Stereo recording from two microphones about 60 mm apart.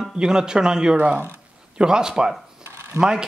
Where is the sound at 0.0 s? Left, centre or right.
Centre.